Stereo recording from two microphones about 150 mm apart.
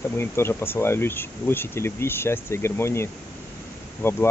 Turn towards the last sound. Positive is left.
turn(degrees=15)  # may be behind; listen again after turning